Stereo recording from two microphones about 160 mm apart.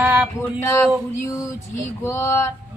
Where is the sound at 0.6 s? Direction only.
15° left (ahead or behind).